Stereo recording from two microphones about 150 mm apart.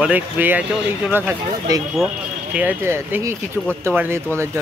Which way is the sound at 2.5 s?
10° right (ahead or behind).